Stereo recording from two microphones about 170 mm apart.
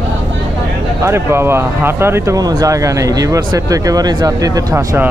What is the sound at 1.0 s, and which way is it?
Speech, 15° right (ahead or behind).